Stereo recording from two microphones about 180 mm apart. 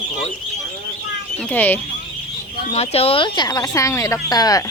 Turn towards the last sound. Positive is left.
turn(degrees=20)  # may be behind; listen again after turning